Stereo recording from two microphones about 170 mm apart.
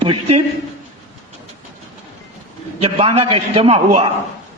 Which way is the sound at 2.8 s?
35° right (ahead or behind).